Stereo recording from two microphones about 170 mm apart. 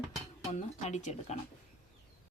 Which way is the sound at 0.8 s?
40° left (ahead or behind).